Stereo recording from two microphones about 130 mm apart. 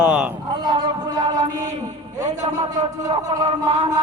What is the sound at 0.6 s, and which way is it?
Music, 35° right (ahead or behind).